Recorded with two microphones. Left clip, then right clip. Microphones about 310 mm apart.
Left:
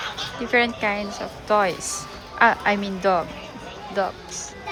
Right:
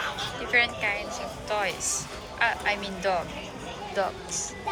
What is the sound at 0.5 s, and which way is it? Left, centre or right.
Speech, centre.